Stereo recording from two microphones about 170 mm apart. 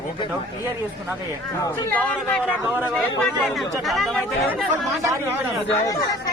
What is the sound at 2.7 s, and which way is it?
Speech, 10° right (ahead or behind).